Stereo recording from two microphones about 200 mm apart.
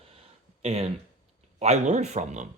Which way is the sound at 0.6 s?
30° right (ahead or behind).